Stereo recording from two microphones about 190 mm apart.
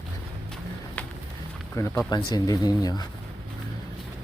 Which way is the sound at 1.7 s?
15° left (ahead or behind).